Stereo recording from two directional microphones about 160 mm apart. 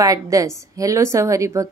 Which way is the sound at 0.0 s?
20° right (ahead or behind).